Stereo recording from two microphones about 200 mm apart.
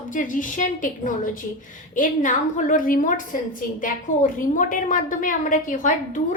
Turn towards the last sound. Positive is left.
turn(degrees=40)  # may be behind; listen again after turning